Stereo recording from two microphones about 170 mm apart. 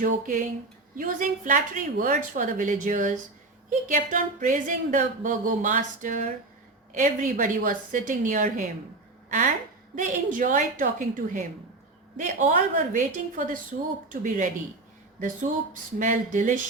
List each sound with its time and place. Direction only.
0.0 s speech: 45° right (ahead or behind)
9.9 s speech: 50° right (ahead or behind)